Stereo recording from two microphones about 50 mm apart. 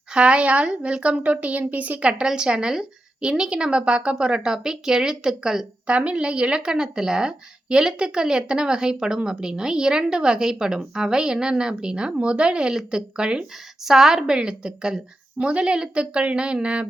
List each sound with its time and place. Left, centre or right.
0.1 s a woman's voice: centre
5.9 s speech: right
13.8 s a woman's voice: centre